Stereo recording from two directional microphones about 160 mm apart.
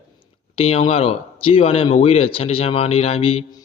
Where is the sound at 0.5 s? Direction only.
40° left (ahead or behind).